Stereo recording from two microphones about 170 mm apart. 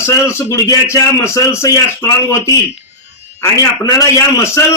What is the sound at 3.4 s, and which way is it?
A man's voice, 20° left (ahead or behind).